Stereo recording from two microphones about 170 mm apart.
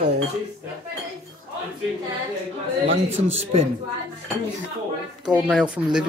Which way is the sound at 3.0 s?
35° right (ahead or behind).